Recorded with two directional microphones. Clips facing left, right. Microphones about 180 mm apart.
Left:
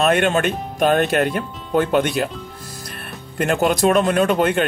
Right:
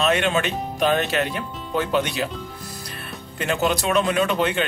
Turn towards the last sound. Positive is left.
turn(degrees=50)  # may be behind; listen again after turning